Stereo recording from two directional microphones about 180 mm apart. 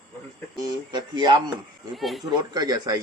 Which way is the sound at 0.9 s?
25° right (ahead or behind).